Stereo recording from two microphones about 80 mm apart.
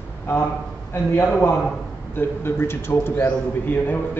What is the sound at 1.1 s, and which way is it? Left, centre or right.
A man's voice, left.